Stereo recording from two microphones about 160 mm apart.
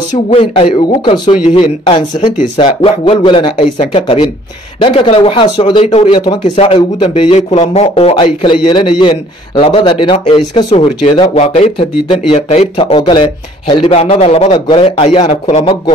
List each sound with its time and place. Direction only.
0.3 s speech: 40° left (ahead or behind)
2.3 s speech: 55° left (ahead or behind)
2.8 s speech: 35° left (ahead or behind)
13.9 s speech: 45° left (ahead or behind)